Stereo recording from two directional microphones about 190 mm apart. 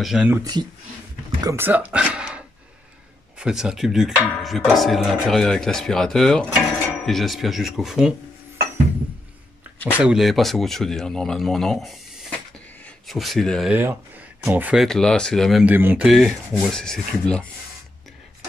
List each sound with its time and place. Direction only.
0.0 s speech: 5° right (ahead or behind)
0.4 s speech: 20° right (ahead or behind); by 8.1 s centre (ahead or behind)
9.9 s speech: 5° right (ahead or behind)
13.7 s speech: 10° right (ahead or behind); by 17.5 s 5° left (ahead or behind)